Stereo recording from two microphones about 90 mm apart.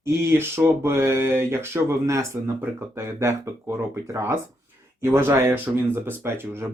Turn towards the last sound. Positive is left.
turn(degrees=-25)  # may be behind; listen again after turning